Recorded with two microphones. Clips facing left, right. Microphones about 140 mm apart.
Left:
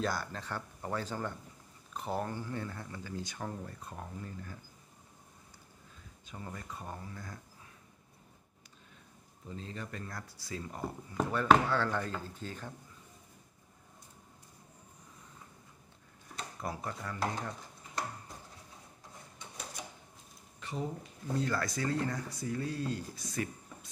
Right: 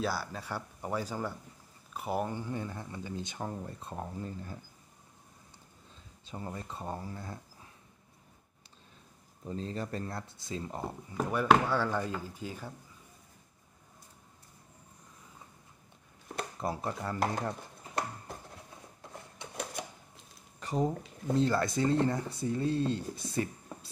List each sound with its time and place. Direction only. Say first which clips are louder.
0.0 s speech: right 1 dB; 5° right (ahead or behind); by 4.6 s 25° right (ahead or behind)
6.2 s speech: right 4 dB; 30° right (ahead or behind)
9.5 s speech: right 6 dB; 35° right (ahead or behind)
11.2 s speech: right 1 dB; 15° right (ahead or behind)
16.6 s speech: right 4 dB; 30° right (ahead or behind)
19.3 s cash register: right 7 dB; 65° right (ahead or behind)
20.6 s speech: right 7 dB; 40° right (ahead or behind)
21.4 s speech: right 6 dB; 25° right (ahead or behind)